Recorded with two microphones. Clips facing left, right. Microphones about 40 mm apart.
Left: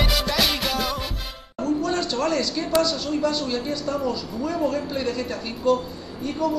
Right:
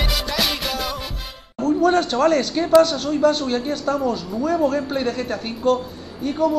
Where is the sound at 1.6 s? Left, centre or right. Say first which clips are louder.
Right 6 dB; right.